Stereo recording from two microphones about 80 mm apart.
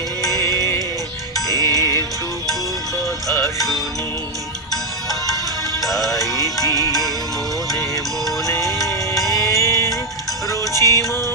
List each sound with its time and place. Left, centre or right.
0.3 s music: right
1.5 s music: left
3.3 s music: left
5.8 s music: centre
8.4 s music: left